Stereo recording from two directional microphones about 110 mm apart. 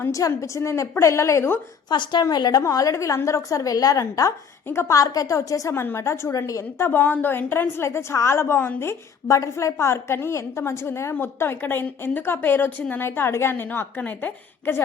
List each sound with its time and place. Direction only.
0.0 s a woman's voice: 30° left (ahead or behind)
1.9 s a woman's voice: 45° left (ahead or behind); by 14.8 s 15° left (ahead or behind)